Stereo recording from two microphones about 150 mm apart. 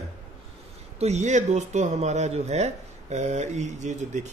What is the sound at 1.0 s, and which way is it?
Speech, 50° right (ahead or behind).